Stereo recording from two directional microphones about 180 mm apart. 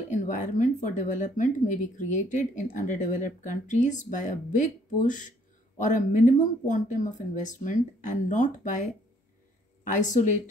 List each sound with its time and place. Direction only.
0.1 s speech: 45° left (ahead or behind)
9.9 s speech: 45° left (ahead or behind)